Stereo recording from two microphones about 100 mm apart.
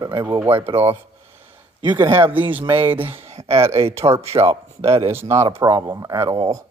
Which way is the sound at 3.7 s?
75° right (ahead or behind).